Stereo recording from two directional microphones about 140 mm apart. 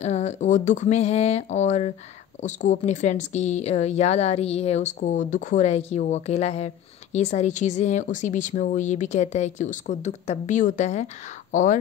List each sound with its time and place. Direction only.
0.0 s speech: 55° left (ahead or behind)